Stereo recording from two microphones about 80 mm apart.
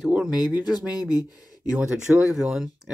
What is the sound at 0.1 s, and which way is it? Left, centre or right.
Speech, centre.